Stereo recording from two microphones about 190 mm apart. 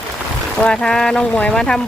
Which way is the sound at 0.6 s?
5° left (ahead or behind).